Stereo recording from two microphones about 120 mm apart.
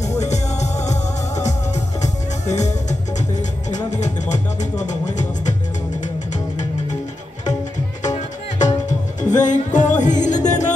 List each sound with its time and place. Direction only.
0.0 s music: 70° left (ahead or behind)
8.1 s music: 30° left (ahead or behind)
8.8 s music: 90° left